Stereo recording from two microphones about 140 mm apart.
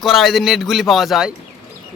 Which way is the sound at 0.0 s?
Centre (ahead or behind).